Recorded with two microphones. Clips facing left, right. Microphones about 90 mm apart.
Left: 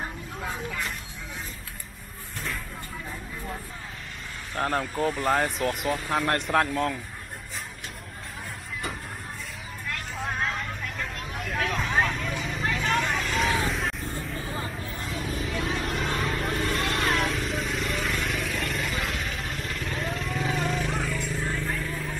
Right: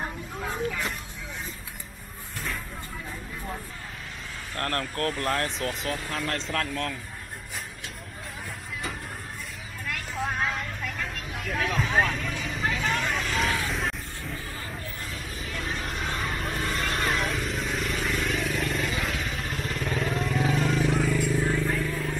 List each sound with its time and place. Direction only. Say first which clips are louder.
0.0 s vehicle: right 1 dB; centre (ahead or behind)
4.6 s speech: left 3 dB; 10° left (ahead or behind)
6.2 s speech: left 5 dB; 60° left (ahead or behind)
6.7 s speech: left 5 dB; 15° left (ahead or behind)
10.1 s vehicle: right 2 dB; centre (ahead or behind)
11.5 s vehicle: right 1 dB; centre (ahead or behind)